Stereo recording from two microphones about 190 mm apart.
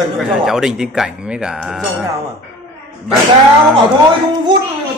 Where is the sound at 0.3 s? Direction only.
Centre (ahead or behind).